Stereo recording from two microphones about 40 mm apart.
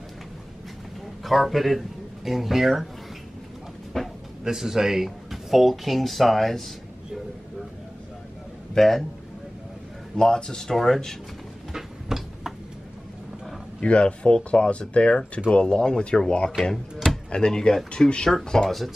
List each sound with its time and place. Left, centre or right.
1.2 s speech: centre
3.9 s music: centre
4.5 s speech: centre
8.7 s speech: centre
10.1 s speech: centre
11.7 s a sound: centre
13.7 s speech: left
16.7 s drawer open or close: centre
17.3 s speech: centre